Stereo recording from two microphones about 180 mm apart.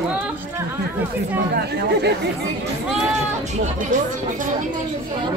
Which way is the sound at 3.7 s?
45° right (ahead or behind).